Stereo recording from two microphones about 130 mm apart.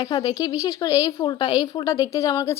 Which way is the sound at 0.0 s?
30° left (ahead or behind).